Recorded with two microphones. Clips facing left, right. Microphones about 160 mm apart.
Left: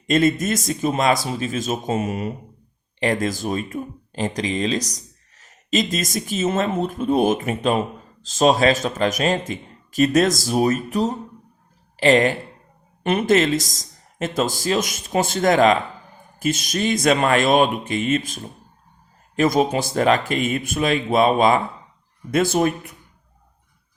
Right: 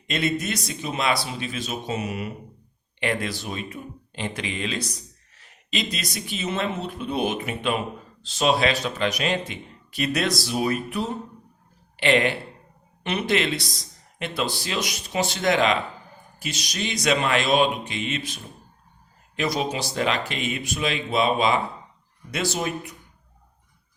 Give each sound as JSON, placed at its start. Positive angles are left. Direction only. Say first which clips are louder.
{"t": 0.1, "sound": "speech", "louder": "left 7 dB", "side_deg": 45}
{"t": 19.4, "sound": "speech", "louder": "left 7 dB", "side_deg": 50}